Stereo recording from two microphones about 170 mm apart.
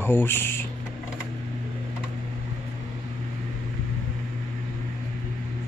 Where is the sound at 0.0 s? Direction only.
15° left (ahead or behind).